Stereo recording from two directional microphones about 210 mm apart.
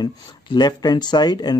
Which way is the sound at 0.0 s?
20° left (ahead or behind).